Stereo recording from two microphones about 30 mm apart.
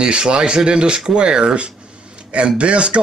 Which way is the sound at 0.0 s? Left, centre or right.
Right.